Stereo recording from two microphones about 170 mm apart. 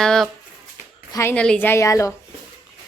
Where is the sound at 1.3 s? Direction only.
5° left (ahead or behind).